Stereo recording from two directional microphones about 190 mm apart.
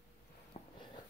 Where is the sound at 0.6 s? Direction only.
30° left (ahead or behind).